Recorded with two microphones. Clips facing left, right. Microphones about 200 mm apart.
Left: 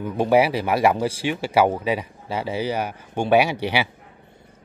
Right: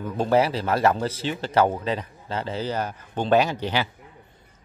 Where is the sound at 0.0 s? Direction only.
10° left (ahead or behind).